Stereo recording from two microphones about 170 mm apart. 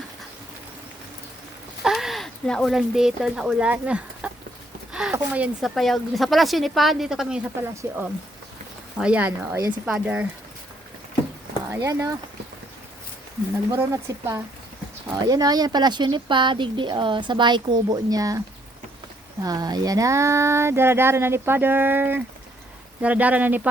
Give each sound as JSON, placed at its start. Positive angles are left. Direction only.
{"t": 1.8, "sound": "speech", "side_deg": 0}
{"t": 4.9, "sound": "a sound", "side_deg": -5}
{"t": 5.1, "sound": "a woman's voice", "side_deg": -10}
{"t": 11.7, "sound": "speech", "side_deg": -20}
{"t": 13.7, "sound": "speech", "side_deg": -20}